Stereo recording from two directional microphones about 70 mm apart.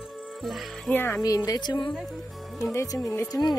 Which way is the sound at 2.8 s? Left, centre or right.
Left.